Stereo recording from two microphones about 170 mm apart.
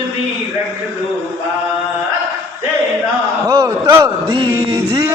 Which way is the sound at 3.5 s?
20° right (ahead or behind).